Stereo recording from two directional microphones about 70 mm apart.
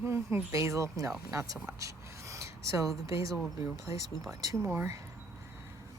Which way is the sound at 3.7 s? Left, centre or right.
Right.